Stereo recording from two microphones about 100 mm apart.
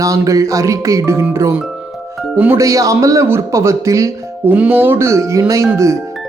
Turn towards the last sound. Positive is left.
turn(degrees=-30)  # may be behind; listen again after turning